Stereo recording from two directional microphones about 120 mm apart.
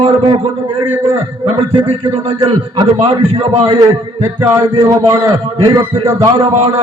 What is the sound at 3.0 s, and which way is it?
Speech, 45° right (ahead or behind).